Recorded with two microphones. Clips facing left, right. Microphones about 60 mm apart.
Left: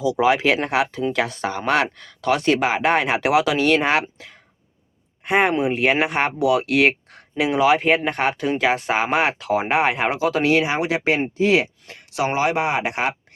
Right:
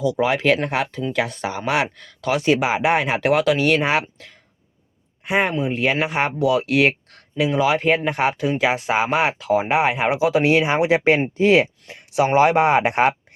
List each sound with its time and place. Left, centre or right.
0.0 s speech: centre
10.2 s speech: centre
10.7 s speech: right
11.9 s speech: right
12.3 s speech: right